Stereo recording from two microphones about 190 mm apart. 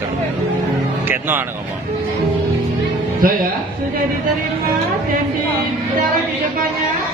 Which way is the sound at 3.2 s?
50° right (ahead or behind).